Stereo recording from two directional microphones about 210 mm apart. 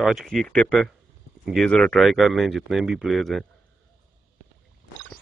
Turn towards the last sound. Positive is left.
turn(degrees=0)  # may be behind; listen again after turning